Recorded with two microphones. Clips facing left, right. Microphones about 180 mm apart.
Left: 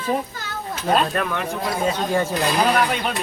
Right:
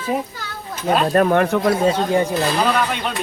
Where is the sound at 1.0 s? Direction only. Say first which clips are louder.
Right 9 dB; 40° right (ahead or behind).